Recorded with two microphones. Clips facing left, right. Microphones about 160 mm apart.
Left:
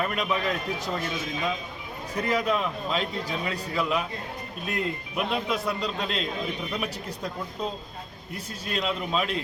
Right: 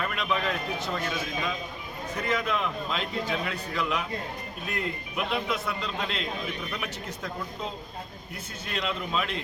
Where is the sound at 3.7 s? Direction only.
5° left (ahead or behind).